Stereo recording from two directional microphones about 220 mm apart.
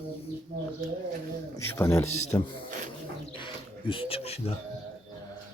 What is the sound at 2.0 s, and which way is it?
Speech, 30° left (ahead or behind).